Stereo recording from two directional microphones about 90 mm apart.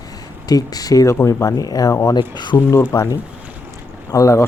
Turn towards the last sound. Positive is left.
turn(degrees=35)  # may be behind; listen again after turning